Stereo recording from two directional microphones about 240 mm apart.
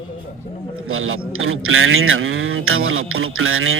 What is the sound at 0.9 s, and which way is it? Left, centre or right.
Speech, right.